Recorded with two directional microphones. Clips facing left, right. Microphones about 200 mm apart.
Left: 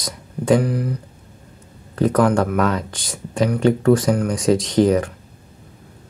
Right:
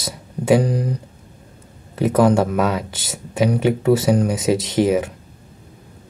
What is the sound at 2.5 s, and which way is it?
Speech, 5° right (ahead or behind).